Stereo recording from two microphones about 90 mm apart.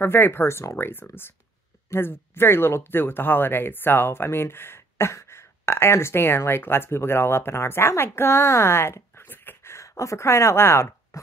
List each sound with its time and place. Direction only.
0.0 s speech: 25° left (ahead or behind)